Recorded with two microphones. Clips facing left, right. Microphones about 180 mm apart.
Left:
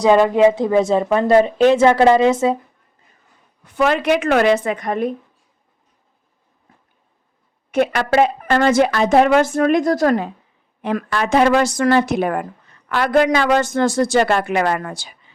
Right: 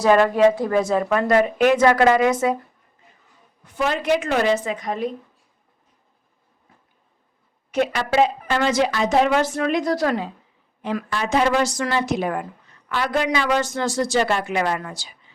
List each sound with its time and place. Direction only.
0.0 s a woman's voice: 20° left (ahead or behind)
3.8 s a woman's voice: 70° left (ahead or behind)
7.7 s a woman's voice: 55° left (ahead or behind)
10.8 s a woman's voice: 60° left (ahead or behind)